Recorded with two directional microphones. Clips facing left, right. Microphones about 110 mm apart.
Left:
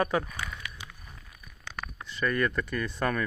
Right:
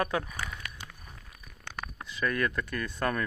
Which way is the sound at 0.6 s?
45° right (ahead or behind).